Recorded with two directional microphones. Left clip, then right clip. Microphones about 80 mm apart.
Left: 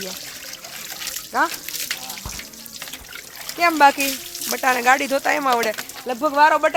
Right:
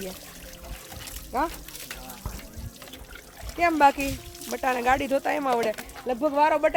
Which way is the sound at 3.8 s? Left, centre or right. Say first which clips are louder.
Left 6 dB; left.